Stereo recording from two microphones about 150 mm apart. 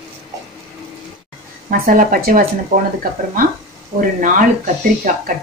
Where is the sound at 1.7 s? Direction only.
70° right (ahead or behind).